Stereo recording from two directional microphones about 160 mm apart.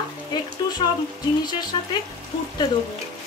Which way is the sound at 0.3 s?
25° left (ahead or behind).